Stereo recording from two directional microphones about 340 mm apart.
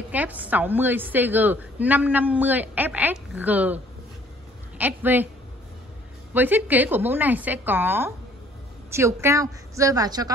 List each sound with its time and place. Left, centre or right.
0.1 s a woman's voice: centre
6.3 s a woman's voice: centre